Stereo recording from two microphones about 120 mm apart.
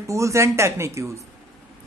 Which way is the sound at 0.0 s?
25° right (ahead or behind).